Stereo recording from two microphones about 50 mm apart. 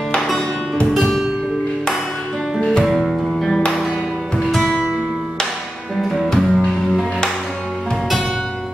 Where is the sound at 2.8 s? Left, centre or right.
Centre.